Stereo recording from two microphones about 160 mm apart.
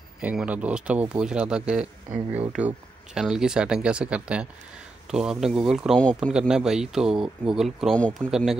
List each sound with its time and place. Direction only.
0.2 s speech: 10° right (ahead or behind)
2.1 s speech: 35° right (ahead or behind)
3.2 s speech: 5° right (ahead or behind)